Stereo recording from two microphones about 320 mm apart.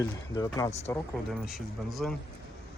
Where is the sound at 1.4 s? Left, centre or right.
Centre.